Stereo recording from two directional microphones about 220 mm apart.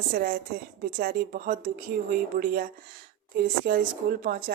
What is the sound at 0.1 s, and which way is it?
Speech, 40° right (ahead or behind).